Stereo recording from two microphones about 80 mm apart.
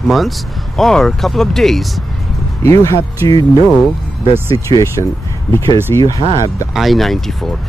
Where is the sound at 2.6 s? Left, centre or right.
Left.